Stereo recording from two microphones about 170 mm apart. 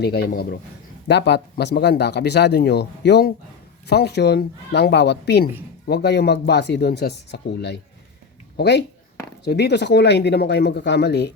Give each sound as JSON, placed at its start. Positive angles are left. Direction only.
{"t": 0.0, "sound": "speech", "side_deg": 70}
{"t": 1.0, "sound": "a man's voice", "side_deg": 85}